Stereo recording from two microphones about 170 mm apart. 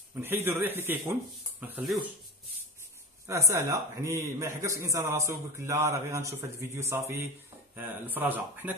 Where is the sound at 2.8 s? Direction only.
15° right (ahead or behind).